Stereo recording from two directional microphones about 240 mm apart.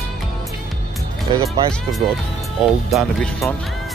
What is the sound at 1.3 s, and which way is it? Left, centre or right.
Speech, right.